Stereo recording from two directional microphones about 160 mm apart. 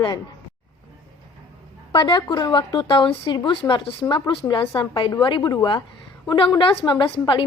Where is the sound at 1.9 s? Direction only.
30° left (ahead or behind).